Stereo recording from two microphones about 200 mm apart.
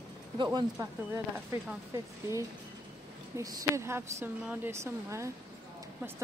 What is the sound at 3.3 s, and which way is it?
A woman's voice, 15° right (ahead or behind).